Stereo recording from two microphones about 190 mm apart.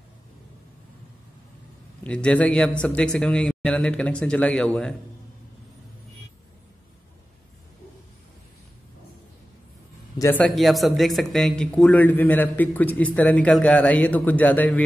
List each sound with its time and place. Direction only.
2.0 s a man's voice: 5° left (ahead or behind)
10.1 s a man's voice: 15° left (ahead or behind)
10.4 s a man's voice: centre (ahead or behind)